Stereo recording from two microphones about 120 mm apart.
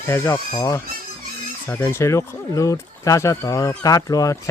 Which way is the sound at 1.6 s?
20° left (ahead or behind).